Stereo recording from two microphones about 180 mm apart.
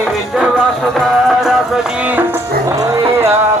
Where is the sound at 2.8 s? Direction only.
20° right (ahead or behind).